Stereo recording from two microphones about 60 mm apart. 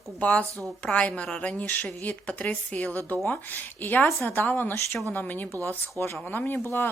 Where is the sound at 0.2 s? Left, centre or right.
Left.